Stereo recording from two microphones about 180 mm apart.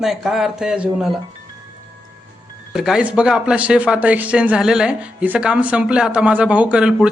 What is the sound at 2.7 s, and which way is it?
Speech, 5° right (ahead or behind).